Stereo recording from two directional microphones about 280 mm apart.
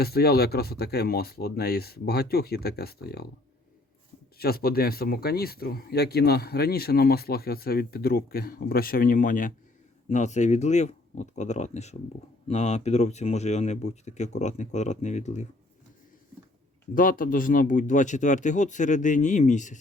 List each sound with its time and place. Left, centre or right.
0.0 s speech: left
4.4 s speech: left
16.9 s speech: left